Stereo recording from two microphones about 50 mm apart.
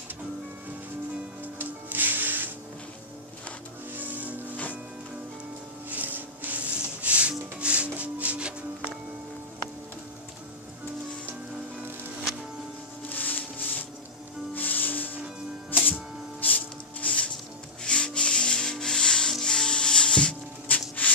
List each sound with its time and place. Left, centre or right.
1.4 s music: right
3.9 s music: right
5.9 s music: right
13.1 s music: left
16.3 s music: left
17.8 s rub: centre
20.7 s music: left